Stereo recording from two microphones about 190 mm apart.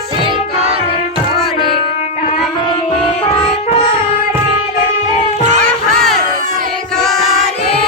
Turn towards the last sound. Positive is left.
turn(degrees=0)  # may be behind; listen again after turning